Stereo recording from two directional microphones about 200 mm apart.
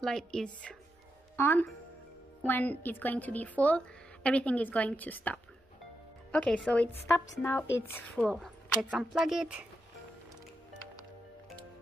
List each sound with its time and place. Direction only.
0.0 s a woman's voice: 5° left (ahead or behind)